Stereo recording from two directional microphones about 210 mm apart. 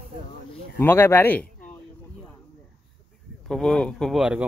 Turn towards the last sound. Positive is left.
turn(degrees=-5)  # may be behind; listen again after turning